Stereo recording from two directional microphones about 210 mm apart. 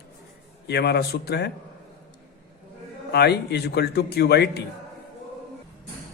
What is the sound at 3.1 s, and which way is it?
A man's voice, 50° left (ahead or behind).